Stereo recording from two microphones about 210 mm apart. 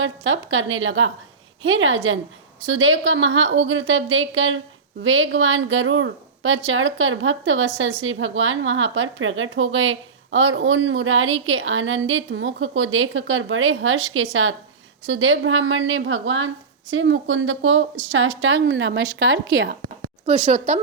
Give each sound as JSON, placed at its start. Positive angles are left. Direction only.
{"t": 0.0, "sound": "a woman's voice", "side_deg": -65}
{"t": 20.2, "sound": "speech", "side_deg": -35}